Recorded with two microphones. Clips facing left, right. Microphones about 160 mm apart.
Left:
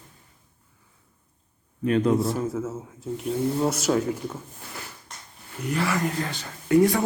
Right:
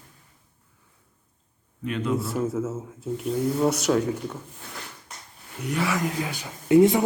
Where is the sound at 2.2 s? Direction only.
Centre (ahead or behind); by 7.0 s 20° right (ahead or behind).